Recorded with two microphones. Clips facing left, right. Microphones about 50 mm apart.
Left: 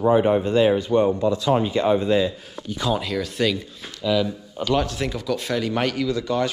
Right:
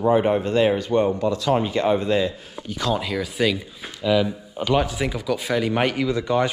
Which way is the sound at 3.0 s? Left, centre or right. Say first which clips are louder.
Even; centre.